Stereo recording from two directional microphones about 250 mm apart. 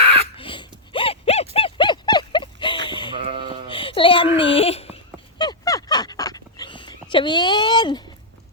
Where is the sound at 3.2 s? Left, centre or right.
Right.